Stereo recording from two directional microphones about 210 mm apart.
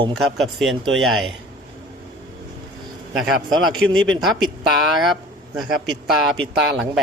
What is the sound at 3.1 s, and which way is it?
Speech, centre (ahead or behind).